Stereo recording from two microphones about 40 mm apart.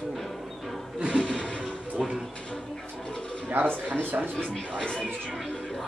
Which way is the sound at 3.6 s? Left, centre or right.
Left.